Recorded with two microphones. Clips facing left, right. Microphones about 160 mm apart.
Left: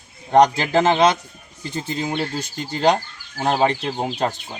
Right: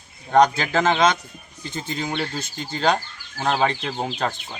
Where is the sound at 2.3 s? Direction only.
15° left (ahead or behind).